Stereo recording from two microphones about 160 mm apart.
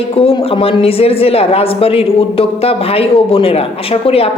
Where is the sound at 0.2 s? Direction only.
35° left (ahead or behind).